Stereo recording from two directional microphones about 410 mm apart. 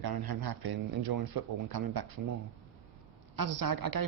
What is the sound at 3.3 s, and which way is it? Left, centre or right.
Speech, right.